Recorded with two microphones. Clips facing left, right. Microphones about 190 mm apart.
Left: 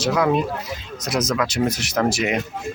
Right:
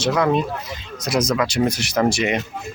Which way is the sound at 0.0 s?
5° left (ahead or behind).